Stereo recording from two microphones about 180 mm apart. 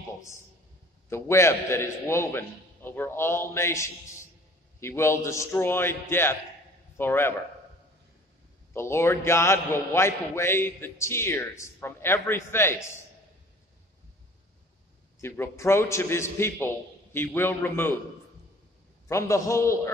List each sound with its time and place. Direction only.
1.1 s a man's voice: 15° left (ahead or behind)
8.7 s a man's voice: 15° left (ahead or behind)
15.1 s a man's voice: 15° left (ahead or behind)
19.0 s a man's voice: 15° left (ahead or behind)